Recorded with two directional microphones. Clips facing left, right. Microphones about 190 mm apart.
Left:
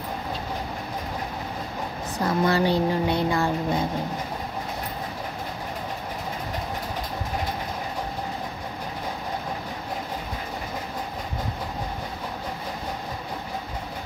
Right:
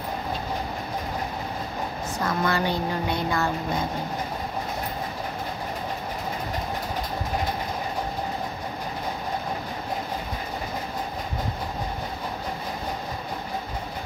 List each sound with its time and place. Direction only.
2.1 s speech: 35° left (ahead or behind)